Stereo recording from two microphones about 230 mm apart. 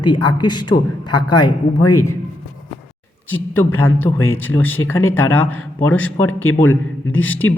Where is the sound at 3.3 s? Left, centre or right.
Centre.